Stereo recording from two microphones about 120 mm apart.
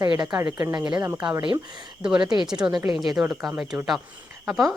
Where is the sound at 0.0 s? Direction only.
35° right (ahead or behind).